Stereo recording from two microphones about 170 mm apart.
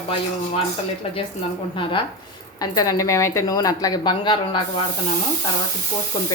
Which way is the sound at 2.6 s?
20° left (ahead or behind).